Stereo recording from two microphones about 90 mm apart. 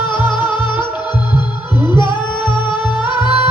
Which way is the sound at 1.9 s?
60° left (ahead or behind).